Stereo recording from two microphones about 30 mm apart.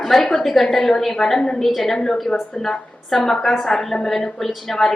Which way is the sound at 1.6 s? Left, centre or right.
Centre.